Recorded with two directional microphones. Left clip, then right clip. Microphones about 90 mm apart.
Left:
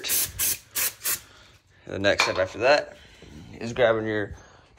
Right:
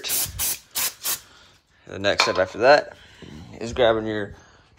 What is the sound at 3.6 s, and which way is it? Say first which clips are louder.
Speech: right 2 dB; 60° right (ahead or behind).